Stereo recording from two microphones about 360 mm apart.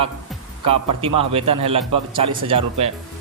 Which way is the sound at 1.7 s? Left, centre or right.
Centre.